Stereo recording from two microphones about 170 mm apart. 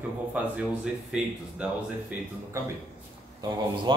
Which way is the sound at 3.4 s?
25° right (ahead or behind).